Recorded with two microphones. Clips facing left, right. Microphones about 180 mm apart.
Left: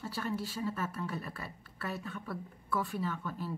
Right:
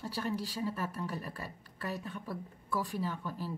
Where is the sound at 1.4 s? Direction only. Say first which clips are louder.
Right 1 dB; 40° right (ahead or behind).